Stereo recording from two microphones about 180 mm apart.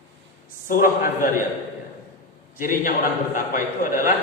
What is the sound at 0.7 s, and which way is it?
Speech, 50° left (ahead or behind).